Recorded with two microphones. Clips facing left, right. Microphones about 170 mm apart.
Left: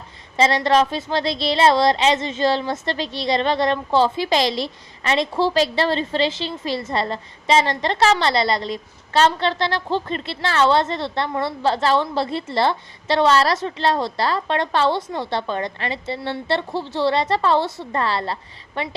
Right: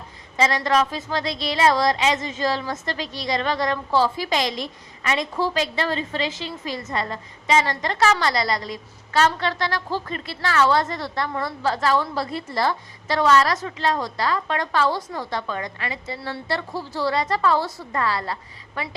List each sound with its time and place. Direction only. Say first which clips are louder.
0.3 s a woman's voice: left 3 dB; 30° left (ahead or behind)